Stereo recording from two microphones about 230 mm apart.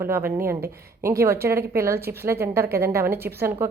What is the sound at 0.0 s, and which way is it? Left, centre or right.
A woman's voice, centre.